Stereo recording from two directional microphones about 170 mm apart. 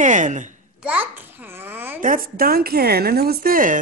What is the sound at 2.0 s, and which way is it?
A woman's voice, 55° right (ahead or behind).